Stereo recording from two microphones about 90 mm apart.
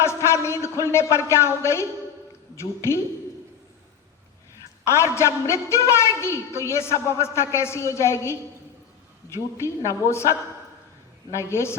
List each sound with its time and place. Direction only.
0.0 s a woman's voice: 30° left (ahead or behind)
4.9 s a woman's voice: 30° left (ahead or behind)